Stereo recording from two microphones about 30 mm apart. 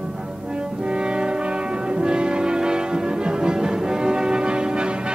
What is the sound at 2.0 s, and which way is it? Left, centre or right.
Church bell, right.